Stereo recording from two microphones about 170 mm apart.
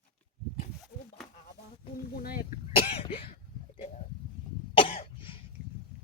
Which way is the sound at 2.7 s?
35° left (ahead or behind).